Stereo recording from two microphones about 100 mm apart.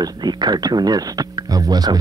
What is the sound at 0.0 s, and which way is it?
Speech, 45° right (ahead or behind).